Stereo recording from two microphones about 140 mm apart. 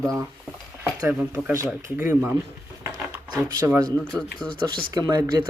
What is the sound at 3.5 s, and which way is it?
Speech, 25° right (ahead or behind).